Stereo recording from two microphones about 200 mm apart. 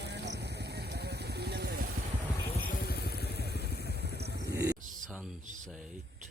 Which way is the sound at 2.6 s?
50° left (ahead or behind).